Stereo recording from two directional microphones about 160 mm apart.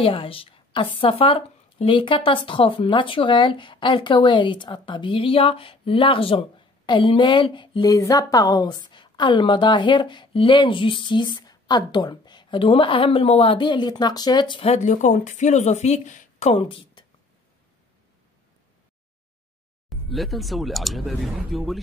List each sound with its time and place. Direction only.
0.0 s a woman's voice: 35° left (ahead or behind)
19.9 s speech: centre (ahead or behind)